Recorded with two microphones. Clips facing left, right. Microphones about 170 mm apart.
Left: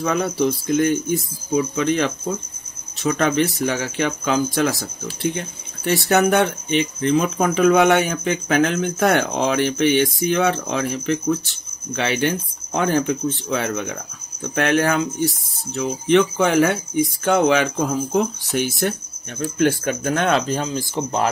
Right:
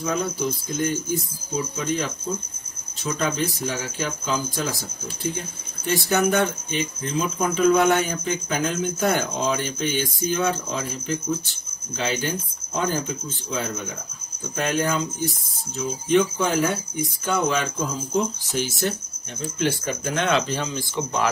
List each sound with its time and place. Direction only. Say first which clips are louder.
0.0 s speech: left 5 dB; 75° left (ahead or behind)
5.9 s speech: left 4 dB; 70° left (ahead or behind); by 21.3 s 35° left (ahead or behind)